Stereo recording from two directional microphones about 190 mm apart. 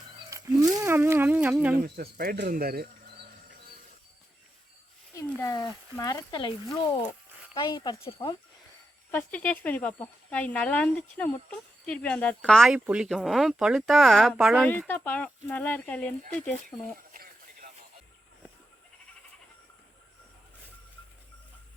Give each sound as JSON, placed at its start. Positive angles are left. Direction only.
{"t": 0.3, "sound": "a sound", "side_deg": -15}
{"t": 1.8, "sound": "speech", "side_deg": -50}
{"t": 5.1, "sound": "speech", "side_deg": 15}
{"t": 7.5, "sound": "speech", "side_deg": 25}
{"t": 9.1, "sound": "speech", "side_deg": 10}
{"t": 16.6, "sound": "a sound", "side_deg": -45}